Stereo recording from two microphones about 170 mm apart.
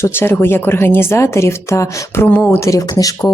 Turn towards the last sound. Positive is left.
turn(degrees=20)  # may be behind; listen again after turning